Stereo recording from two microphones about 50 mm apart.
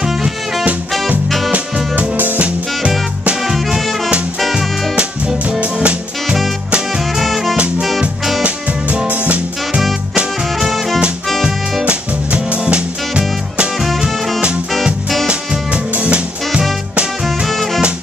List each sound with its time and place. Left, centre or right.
0.0 s music: centre
2.0 s music: right
3.4 s music: centre
4.9 s music: right
6.9 s music: centre
8.4 s music: right
10.6 s music: centre
11.8 s music: right
13.7 s music: centre
15.2 s music: right
17.5 s music: centre